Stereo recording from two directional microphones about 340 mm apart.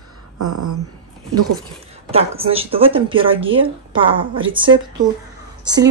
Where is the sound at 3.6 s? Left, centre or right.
Centre.